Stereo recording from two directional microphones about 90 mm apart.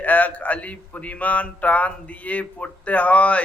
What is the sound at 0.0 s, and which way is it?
Speech, 20° left (ahead or behind).